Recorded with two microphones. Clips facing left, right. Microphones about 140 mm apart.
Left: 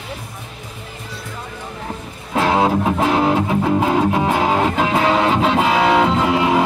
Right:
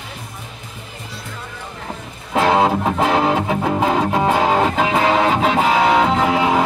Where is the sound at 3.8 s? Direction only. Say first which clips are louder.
Even; 5° left (ahead or behind).